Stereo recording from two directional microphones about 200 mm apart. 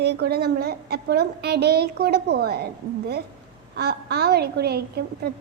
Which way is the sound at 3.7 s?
55° right (ahead or behind).